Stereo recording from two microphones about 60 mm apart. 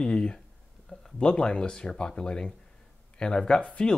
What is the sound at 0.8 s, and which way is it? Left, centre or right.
Speech, centre.